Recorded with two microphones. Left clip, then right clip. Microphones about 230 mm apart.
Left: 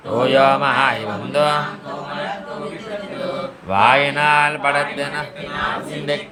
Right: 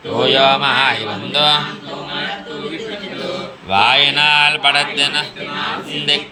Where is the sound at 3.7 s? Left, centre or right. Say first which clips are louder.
Right 2 dB; centre.